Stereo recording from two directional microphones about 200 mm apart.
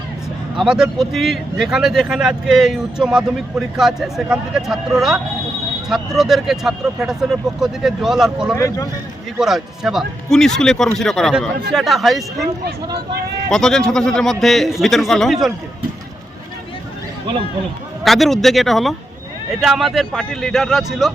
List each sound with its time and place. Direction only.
0.6 s speech: centre (ahead or behind)
8.5 s speech: 15° left (ahead or behind)
9.4 s speech: centre (ahead or behind)
12.6 s speech: 55° right (ahead or behind)
13.5 s speech: 5° left (ahead or behind)
18.0 s speech: centre (ahead or behind)